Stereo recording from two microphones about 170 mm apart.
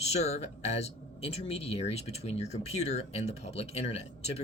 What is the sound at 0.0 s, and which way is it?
Speech, 40° left (ahead or behind).